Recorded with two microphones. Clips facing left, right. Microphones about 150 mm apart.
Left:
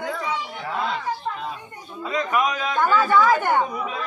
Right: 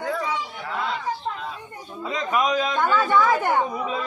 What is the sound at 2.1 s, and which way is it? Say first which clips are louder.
A man's voice: even; 25° right (ahead or behind).